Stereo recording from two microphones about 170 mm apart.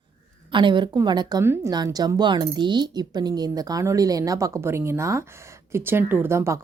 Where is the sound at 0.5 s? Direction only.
30° right (ahead or behind).